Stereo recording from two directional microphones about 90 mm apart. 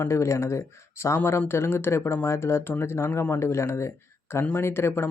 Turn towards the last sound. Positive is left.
turn(degrees=25)  # may be behind; listen again after turning